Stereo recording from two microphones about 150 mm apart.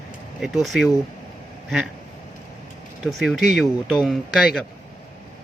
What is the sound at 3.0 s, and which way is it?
Speech, centre (ahead or behind).